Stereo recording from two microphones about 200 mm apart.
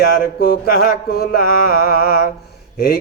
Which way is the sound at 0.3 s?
45° left (ahead or behind).